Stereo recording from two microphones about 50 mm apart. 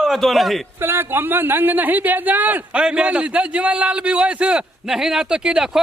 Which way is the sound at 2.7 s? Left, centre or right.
Centre.